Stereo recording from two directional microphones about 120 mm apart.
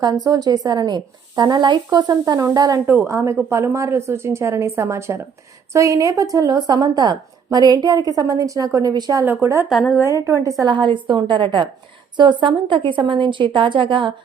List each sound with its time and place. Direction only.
0.0 s a woman's voice: 35° right (ahead or behind)
9.2 s speech: 15° right (ahead or behind)
9.6 s a woman's voice: centre (ahead or behind)
10.0 s a woman's voice: 25° right (ahead or behind)
10.6 s a woman's voice: 40° right (ahead or behind)